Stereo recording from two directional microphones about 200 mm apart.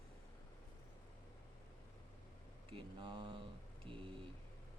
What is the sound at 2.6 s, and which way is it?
Speech, 25° right (ahead or behind).